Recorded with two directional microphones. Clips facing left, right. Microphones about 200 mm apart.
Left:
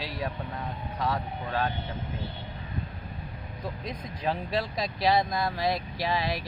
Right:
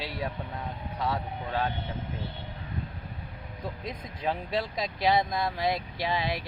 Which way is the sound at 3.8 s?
25° right (ahead or behind).